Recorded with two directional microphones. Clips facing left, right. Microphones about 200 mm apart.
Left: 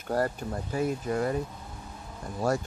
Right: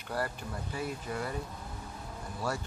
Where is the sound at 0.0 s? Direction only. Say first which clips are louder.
Left 7 dB; 45° left (ahead or behind).